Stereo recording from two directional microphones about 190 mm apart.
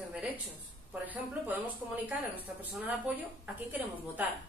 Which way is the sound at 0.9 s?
10° right (ahead or behind).